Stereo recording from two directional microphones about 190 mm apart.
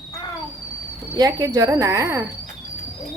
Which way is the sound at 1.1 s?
20° right (ahead or behind).